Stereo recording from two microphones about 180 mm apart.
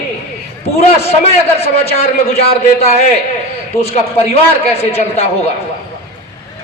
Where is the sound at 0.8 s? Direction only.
35° left (ahead or behind).